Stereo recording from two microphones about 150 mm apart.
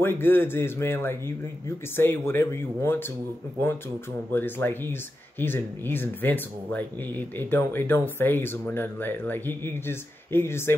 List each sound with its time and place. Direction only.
0.0 s speech: 15° left (ahead or behind)
4.3 s speech: 15° left (ahead or behind)